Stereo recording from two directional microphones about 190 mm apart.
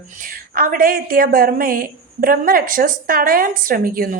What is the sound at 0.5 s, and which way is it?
A woman's voice, 50° right (ahead or behind).